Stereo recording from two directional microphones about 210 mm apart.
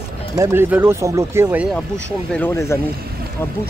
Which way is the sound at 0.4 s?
10° right (ahead or behind).